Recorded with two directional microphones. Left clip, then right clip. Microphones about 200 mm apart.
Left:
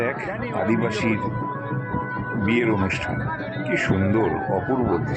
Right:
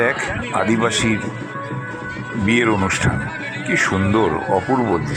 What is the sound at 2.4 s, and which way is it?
Speech, 20° right (ahead or behind).